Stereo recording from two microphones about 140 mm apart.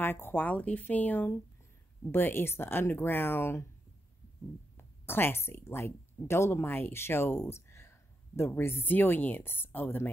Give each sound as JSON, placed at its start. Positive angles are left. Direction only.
{"t": 0.0, "sound": "speech", "side_deg": 15}
{"t": 4.7, "sound": "speech", "side_deg": 15}